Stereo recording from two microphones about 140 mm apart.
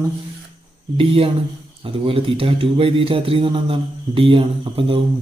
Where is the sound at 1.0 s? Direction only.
40° right (ahead or behind).